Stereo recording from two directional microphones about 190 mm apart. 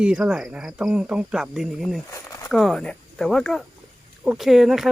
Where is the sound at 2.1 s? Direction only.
15° left (ahead or behind).